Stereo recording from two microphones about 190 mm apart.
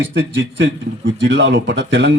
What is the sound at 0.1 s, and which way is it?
A man's voice, 65° right (ahead or behind).